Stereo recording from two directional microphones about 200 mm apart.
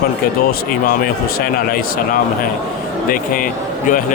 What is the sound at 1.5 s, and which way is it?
Speech, 45° left (ahead or behind).